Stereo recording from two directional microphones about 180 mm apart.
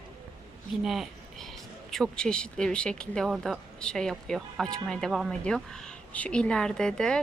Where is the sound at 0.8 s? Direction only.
Centre (ahead or behind).